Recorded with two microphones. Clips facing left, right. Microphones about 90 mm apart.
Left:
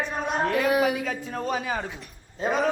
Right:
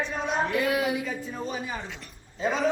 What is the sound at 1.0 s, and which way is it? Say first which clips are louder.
Speech: left 4 dB; 75° left (ahead or behind).